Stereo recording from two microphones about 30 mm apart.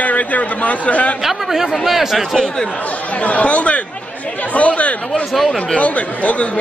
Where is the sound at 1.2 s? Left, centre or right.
Centre.